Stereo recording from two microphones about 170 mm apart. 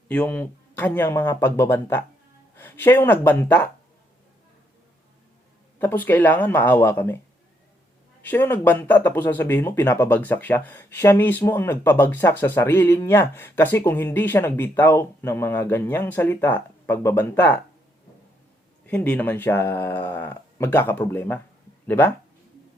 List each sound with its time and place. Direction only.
0.1 s speech: 10° left (ahead or behind)
5.8 s speech: 10° left (ahead or behind)
8.2 s speech: 10° left (ahead or behind)
18.9 s speech: 10° left (ahead or behind)